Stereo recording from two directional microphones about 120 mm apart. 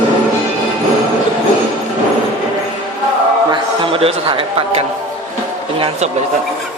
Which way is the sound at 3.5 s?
45° right (ahead or behind).